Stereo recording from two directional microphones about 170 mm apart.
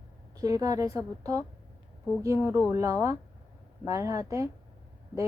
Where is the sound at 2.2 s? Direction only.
15° right (ahead or behind).